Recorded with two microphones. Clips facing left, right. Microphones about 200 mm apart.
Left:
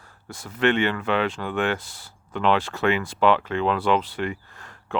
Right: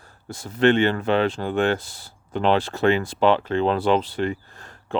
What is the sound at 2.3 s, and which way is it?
Speech, 35° right (ahead or behind).